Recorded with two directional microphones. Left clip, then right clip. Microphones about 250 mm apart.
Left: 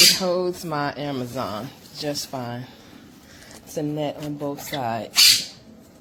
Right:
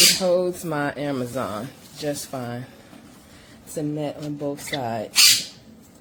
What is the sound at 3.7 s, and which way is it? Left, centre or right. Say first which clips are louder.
Speech: left 1 dB; centre.